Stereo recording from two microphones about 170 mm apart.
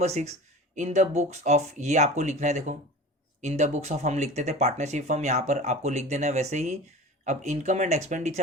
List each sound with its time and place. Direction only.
0.0 s speech: 40° right (ahead or behind)